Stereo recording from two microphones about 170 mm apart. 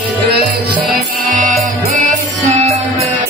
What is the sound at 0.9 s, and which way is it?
Music, 50° right (ahead or behind).